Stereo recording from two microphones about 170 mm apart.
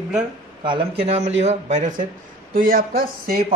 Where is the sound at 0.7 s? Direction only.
35° right (ahead or behind); by 3.5 s 55° right (ahead or behind).